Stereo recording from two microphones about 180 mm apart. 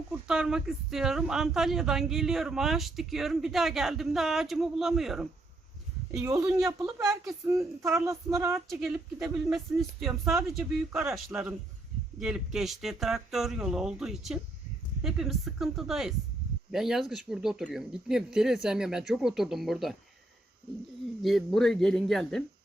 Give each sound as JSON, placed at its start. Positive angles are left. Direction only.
{"t": 0.3, "sound": "speech", "side_deg": -5}
{"t": 6.2, "sound": "child singing", "side_deg": -15}
{"t": 8.7, "sound": "speech", "side_deg": 0}
{"t": 21.2, "sound": "speech", "side_deg": 0}